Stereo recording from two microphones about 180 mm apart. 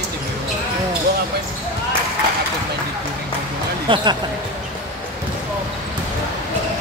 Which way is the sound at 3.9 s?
25° right (ahead or behind).